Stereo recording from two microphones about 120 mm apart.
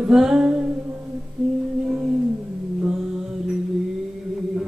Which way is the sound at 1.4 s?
5° right (ahead or behind).